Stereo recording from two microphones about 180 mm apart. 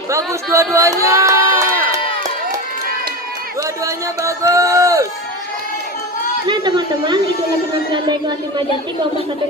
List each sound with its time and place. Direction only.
0.1 s speech: 15° right (ahead or behind)
3.8 s speech: 15° right (ahead or behind)
6.4 s speech: 25° right (ahead or behind)